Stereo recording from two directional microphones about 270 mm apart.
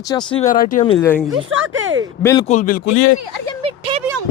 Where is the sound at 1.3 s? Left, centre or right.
Right.